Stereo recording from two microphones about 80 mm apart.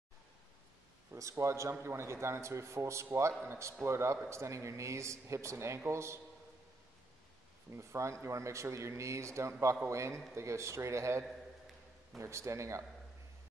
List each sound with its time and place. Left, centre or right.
1.1 s a man's voice: right
7.7 s a man's voice: right